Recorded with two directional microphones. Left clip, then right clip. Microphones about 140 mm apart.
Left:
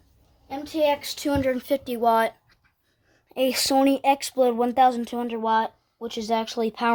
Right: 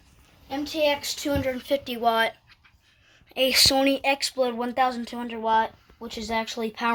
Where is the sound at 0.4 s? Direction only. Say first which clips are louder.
Left 1 dB; 55° left (ahead or behind); by 2.6 s 90° left.